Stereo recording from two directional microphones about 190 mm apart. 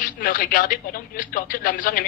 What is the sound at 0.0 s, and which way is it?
A man's voice, 45° left (ahead or behind).